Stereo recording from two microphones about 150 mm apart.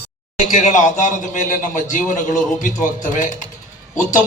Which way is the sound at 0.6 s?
55° left (ahead or behind).